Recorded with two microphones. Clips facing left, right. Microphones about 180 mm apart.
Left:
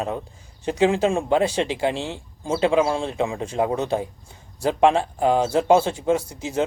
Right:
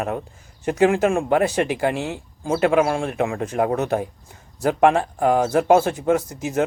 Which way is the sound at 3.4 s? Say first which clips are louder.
Right 3 dB; 30° left (ahead or behind).